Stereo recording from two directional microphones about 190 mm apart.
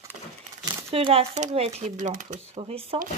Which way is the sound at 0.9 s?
30° right (ahead or behind).